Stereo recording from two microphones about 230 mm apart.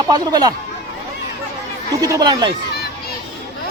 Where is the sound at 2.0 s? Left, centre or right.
Centre.